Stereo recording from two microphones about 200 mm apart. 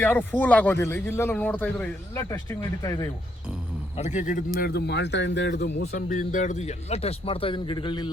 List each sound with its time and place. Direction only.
0.0 s a man's voice: 10° left (ahead or behind)
3.9 s speech: 35° left (ahead or behind); by 6.1 s 55° left (ahead or behind)
6.1 s a man's voice: 40° left (ahead or behind)